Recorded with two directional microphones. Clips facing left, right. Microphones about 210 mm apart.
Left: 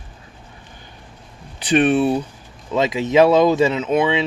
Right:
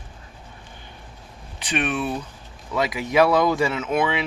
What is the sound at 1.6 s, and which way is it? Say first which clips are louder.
Speech: left 9 dB; 35° left (ahead or behind).